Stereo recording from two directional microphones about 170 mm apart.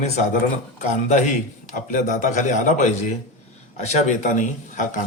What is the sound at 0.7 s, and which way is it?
A man's voice, 45° left (ahead or behind).